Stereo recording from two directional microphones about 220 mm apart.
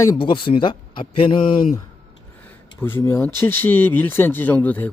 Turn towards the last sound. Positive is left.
turn(degrees=5)  # may be behind; listen again after turning